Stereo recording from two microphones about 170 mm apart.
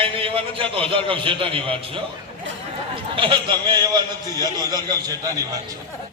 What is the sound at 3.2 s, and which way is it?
A man's voice, 30° right (ahead or behind).